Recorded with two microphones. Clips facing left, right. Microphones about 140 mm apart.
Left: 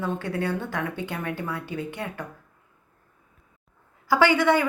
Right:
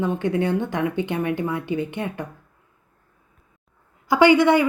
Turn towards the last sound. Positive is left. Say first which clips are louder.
# right 5 dB
turn(degrees=-15)  # may be behind; listen again after turning